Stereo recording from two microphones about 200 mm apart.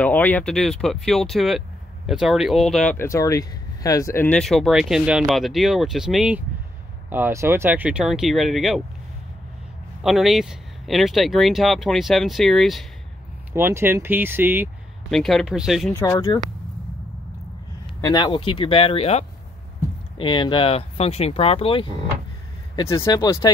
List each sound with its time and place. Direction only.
0.0 s speech: 10° left (ahead or behind)
10.0 s speech: centre (ahead or behind)
13.5 s speech: 10° right (ahead or behind)
15.0 s speech: centre (ahead or behind)
15.9 s speech: 15° left (ahead or behind)
18.0 s speech: 20° left (ahead or behind)
22.8 s speech: 15° left (ahead or behind)